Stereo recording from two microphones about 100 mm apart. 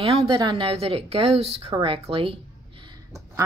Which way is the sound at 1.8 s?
65° right (ahead or behind).